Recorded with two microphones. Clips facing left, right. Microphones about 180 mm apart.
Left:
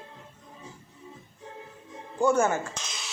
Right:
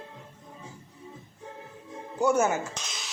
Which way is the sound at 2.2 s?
10° right (ahead or behind).